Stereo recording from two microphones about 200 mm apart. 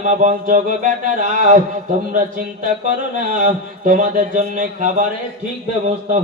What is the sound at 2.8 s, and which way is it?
A man's voice, 40° right (ahead or behind).